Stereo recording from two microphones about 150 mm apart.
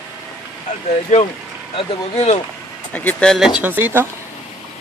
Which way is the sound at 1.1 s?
55° left (ahead or behind).